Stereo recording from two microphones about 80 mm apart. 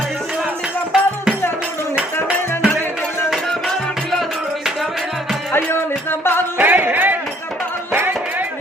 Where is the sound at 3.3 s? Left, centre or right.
Centre.